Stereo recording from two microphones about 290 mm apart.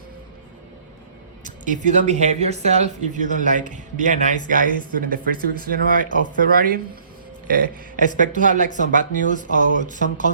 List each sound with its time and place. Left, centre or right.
1.6 s speech: right
6.1 s speech: left
6.4 s speech: right
9.2 s speech: left